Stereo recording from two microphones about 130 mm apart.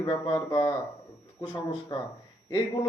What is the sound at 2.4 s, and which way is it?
Speech, 30° left (ahead or behind).